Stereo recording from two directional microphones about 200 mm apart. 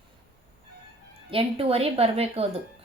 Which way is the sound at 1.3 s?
30° right (ahead or behind).